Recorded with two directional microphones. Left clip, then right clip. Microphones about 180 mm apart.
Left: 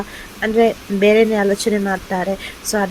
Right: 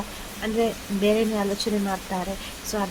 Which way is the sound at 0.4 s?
25° left (ahead or behind).